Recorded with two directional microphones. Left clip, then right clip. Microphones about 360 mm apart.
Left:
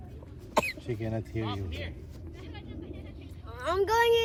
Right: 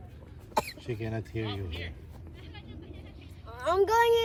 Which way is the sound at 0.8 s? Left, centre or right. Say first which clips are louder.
Left 1 dB; centre.